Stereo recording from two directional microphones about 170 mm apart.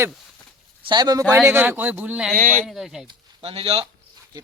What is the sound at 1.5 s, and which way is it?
Speech, 10° right (ahead or behind).